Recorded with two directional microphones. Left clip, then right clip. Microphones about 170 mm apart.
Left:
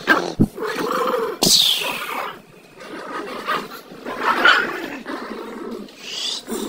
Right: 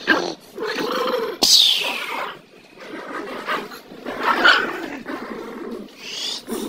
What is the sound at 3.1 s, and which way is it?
Dog, centre (ahead or behind).